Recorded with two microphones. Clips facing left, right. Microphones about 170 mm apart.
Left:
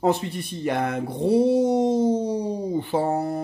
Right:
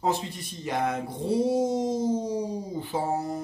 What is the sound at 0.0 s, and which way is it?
Speech, 60° left (ahead or behind).